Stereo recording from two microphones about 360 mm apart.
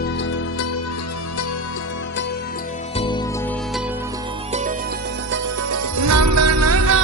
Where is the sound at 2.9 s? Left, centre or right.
Centre.